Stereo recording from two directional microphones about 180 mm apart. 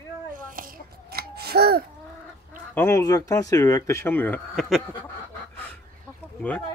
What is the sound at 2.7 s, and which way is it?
Speech, 15° left (ahead or behind).